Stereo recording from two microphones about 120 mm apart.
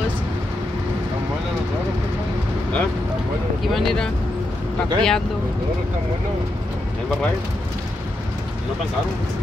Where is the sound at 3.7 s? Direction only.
Centre (ahead or behind).